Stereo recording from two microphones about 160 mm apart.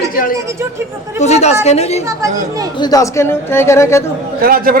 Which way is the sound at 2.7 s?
25° left (ahead or behind).